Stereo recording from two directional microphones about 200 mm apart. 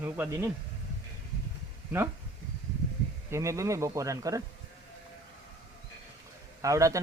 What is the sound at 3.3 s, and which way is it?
Speech, 15° right (ahead or behind).